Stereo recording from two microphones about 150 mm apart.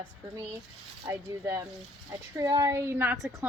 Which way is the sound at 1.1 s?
20° right (ahead or behind).